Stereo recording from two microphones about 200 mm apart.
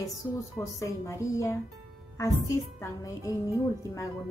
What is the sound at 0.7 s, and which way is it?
A woman's voice, 15° left (ahead or behind).